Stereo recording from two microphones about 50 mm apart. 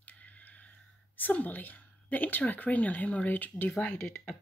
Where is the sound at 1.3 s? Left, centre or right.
Left.